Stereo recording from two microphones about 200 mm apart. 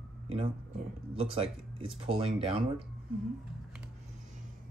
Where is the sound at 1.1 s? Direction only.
30° right (ahead or behind).